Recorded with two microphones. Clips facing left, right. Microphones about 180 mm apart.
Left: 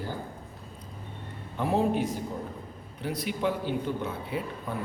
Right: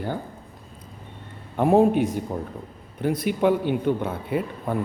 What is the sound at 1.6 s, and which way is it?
Speech, 50° right (ahead or behind).